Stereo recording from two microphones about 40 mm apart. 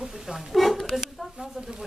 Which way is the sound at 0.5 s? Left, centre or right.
Centre.